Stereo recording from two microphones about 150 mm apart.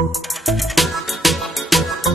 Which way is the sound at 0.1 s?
Centre (ahead or behind).